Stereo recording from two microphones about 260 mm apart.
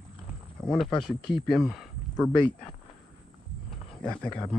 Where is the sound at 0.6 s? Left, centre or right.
Centre.